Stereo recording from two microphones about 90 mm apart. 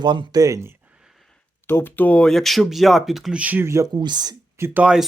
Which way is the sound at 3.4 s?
20° right (ahead or behind).